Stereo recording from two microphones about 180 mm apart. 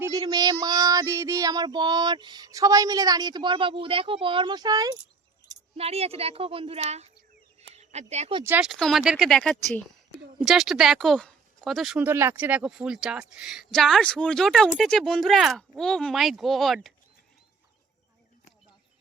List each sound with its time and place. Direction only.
0.0 s child singing: 20° right (ahead or behind)
0.6 s a sound: 20° right (ahead or behind)
5.7 s a woman's voice: 35° right (ahead or behind)
8.4 s speech: 10° right (ahead or behind)
8.7 s speech: centre (ahead or behind)